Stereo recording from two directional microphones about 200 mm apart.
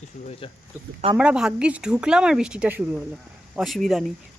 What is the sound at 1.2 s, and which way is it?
Speech, 5° right (ahead or behind).